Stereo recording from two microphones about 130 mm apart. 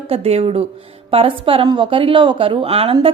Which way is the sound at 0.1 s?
50° right (ahead or behind).